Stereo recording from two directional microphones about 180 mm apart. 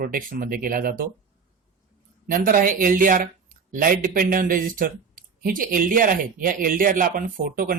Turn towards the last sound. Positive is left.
turn(degrees=-50)  # may be behind; listen again after turning